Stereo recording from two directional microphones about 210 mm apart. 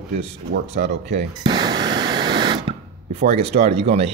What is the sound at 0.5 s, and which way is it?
Speech, 55° right (ahead or behind).